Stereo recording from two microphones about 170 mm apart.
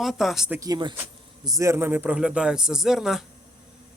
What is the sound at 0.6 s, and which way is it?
Speech, 25° right (ahead or behind).